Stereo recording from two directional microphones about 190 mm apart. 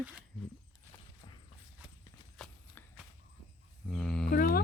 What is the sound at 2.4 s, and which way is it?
Clip-clop, 5° left (ahead or behind).